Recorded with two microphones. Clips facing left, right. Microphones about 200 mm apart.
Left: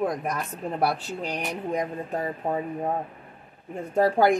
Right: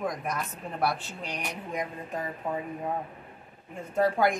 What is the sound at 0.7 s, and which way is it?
Speech, 35° left (ahead or behind).